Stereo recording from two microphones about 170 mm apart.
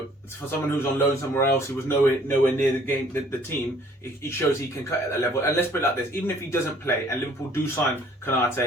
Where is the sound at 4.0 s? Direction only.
15° left (ahead or behind).